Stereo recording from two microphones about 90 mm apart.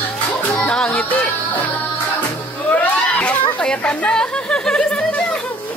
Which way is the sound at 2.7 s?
15° left (ahead or behind).